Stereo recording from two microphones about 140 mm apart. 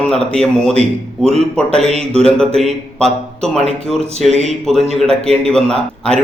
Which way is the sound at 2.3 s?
5° left (ahead or behind).